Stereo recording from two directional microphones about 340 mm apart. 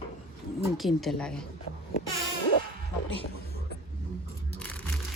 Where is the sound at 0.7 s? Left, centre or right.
Centre.